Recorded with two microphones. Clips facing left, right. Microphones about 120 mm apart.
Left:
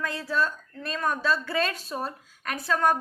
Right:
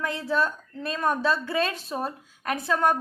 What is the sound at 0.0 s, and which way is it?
A woman's voice, 20° right (ahead or behind).